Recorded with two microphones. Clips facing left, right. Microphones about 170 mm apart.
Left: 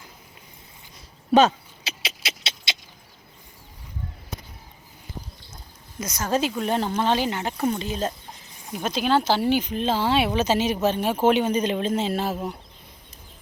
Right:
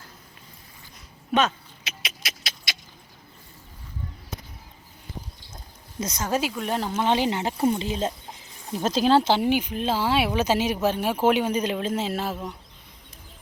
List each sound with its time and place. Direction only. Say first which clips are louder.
1.3 s keys jangling: left 6 dB; 30° left (ahead or behind)
6.0 s speech: right 1 dB; 25° right (ahead or behind)
6.2 s speech: left 3 dB; 10° right (ahead or behind)
7.0 s speech: even; 20° right (ahead or behind)
8.7 s speech: right 3 dB; 35° right (ahead or behind); by 12.5 s 5° left (ahead or behind)